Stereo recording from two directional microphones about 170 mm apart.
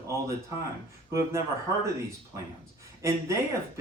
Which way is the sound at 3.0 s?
15° right (ahead or behind).